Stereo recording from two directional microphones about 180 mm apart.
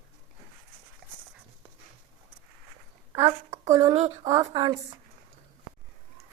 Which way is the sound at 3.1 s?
30° right (ahead or behind).